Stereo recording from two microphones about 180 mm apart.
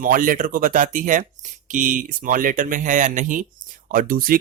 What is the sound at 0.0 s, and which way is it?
Speech, 50° right (ahead or behind).